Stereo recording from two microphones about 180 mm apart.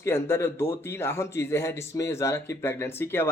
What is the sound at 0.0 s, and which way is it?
Speech, 15° left (ahead or behind).